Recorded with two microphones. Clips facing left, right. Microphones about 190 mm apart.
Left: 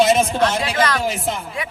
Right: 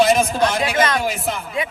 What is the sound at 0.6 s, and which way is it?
Speech, 20° right (ahead or behind).